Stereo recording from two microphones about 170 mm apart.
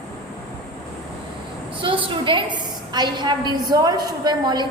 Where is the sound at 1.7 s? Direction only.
30° right (ahead or behind).